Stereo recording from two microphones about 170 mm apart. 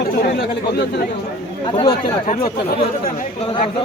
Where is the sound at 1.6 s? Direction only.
25° left (ahead or behind).